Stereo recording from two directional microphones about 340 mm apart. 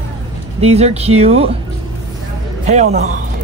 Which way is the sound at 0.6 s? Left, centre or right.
Centre.